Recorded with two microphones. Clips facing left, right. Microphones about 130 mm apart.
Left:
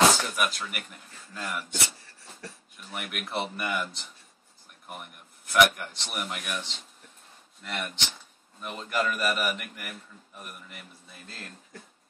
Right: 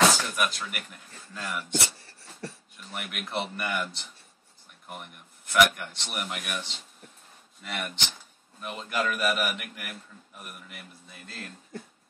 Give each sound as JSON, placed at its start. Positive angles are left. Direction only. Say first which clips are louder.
{"t": 0.1, "sound": "speech", "louder": "even", "side_deg": 0}
{"t": 2.0, "sound": "a sound", "louder": "right 4 dB", "side_deg": -30}
{"t": 2.9, "sound": "a man's voice", "louder": "even", "side_deg": 0}